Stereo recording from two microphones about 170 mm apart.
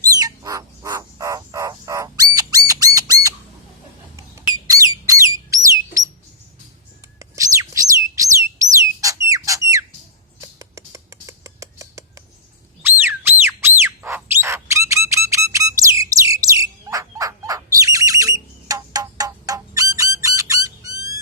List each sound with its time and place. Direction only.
0.2 s bird: 20° right (ahead or behind)
6.0 s a sound: 20° right (ahead or behind)
7.2 s bird: 20° right (ahead or behind)
9.0 s whistle: 20° right (ahead or behind)
10.4 s rodents: 20° right (ahead or behind)
12.8 s a sound: 10° right (ahead or behind)
13.4 s squawk: 15° right (ahead or behind)
16.3 s bird: 20° right (ahead or behind)